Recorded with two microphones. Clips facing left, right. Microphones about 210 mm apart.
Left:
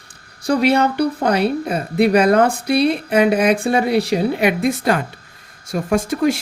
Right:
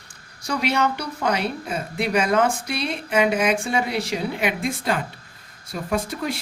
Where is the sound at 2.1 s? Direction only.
60° left (ahead or behind).